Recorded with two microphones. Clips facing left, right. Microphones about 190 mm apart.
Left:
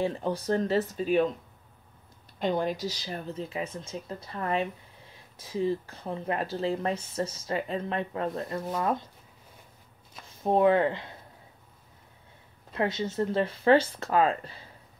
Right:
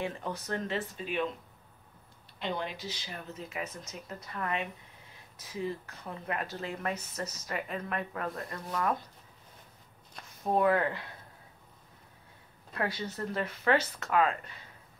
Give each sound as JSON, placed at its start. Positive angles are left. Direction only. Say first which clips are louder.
{"t": 0.0, "sound": "speech", "louder": "left 7 dB", "side_deg": 30}
{"t": 2.3, "sound": "speech", "louder": "left 8 dB", "side_deg": 45}
{"t": 10.4, "sound": "speech", "louder": "left 5 dB", "side_deg": 25}
{"t": 12.7, "sound": "speech", "louder": "left 6 dB", "side_deg": 25}